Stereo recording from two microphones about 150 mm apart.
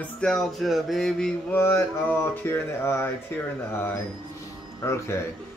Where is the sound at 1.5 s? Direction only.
15° left (ahead or behind).